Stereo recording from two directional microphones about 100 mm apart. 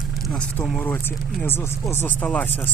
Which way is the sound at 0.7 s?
20° left (ahead or behind).